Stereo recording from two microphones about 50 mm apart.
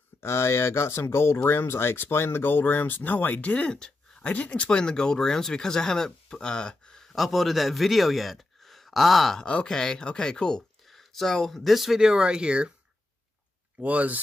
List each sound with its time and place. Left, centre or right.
0.2 s speech: left; by 9.4 s centre
9.4 s speech: centre
10.9 s speech: centre
13.7 s speech: right